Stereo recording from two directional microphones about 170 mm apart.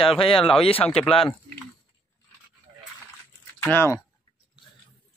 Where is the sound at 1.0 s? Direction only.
Centre (ahead or behind).